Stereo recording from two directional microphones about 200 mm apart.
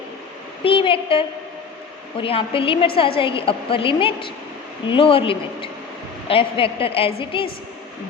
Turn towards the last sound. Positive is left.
turn(degrees=25)  # may be behind; listen again after turning